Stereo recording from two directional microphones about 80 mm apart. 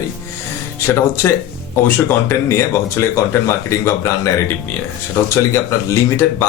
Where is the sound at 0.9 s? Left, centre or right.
Left.